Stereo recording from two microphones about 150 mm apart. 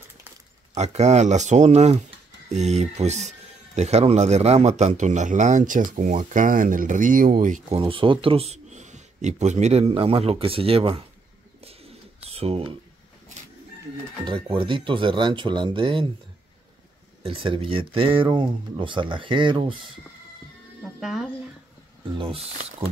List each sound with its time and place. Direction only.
0.7 s speech: 50° right (ahead or behind)
7.8 s a man's voice: 35° right (ahead or behind)
11.6 s bird: 40° right (ahead or behind)
14.2 s a man's voice: 35° right (ahead or behind)
17.2 s a man's voice: 35° right (ahead or behind)
21.0 s speech: centre (ahead or behind)
22.1 s a man's voice: 35° right (ahead or behind)